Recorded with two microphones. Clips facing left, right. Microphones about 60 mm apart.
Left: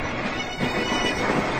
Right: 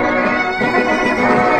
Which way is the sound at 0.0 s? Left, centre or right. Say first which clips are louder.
Right 13 dB; right.